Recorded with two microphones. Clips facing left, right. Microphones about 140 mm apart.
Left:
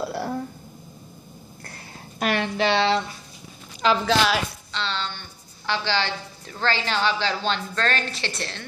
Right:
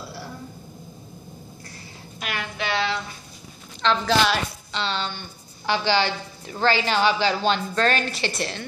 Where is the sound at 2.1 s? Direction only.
35° left (ahead or behind).